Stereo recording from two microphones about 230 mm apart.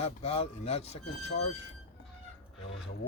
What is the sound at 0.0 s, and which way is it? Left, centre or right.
Speech, left.